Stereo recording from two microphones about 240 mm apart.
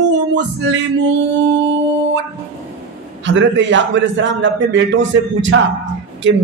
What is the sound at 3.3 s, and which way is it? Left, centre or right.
Music, right.